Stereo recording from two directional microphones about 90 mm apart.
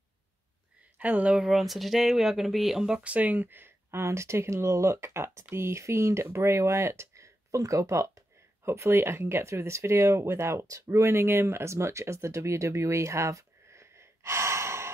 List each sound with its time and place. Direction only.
0.9 s speech: 15° right (ahead or behind)
1.4 s speech: centre (ahead or behind); by 14.9 s 30° right (ahead or behind)